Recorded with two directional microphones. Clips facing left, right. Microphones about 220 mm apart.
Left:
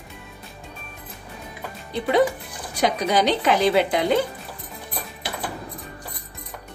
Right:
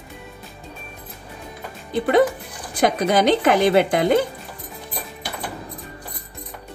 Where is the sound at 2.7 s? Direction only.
50° right (ahead or behind).